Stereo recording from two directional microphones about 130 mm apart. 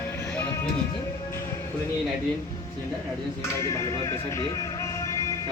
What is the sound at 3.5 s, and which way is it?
Speech, 25° left (ahead or behind).